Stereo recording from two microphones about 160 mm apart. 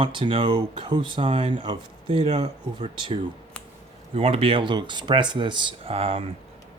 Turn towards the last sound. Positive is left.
turn(degrees=-35)  # may be behind; listen again after turning